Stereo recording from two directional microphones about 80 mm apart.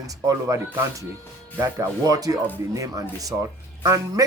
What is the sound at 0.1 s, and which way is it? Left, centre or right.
A man's voice, right.